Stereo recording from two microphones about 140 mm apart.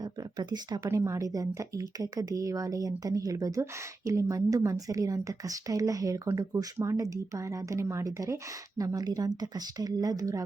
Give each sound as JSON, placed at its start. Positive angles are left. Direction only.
{"t": 0.0, "sound": "speech", "side_deg": -30}